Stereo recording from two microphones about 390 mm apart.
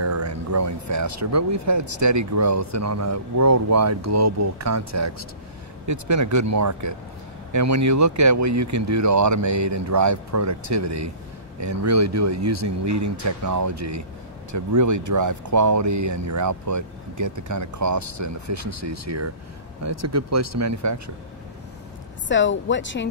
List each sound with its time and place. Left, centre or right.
0.0 s speech: right
22.3 s speech: left